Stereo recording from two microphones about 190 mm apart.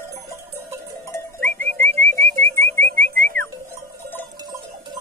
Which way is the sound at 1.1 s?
10° left (ahead or behind).